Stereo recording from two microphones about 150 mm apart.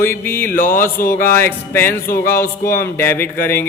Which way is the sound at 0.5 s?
70° left (ahead or behind).